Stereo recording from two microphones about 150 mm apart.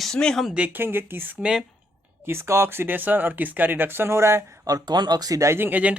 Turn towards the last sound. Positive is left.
turn(degrees=-10)  # may be behind; listen again after turning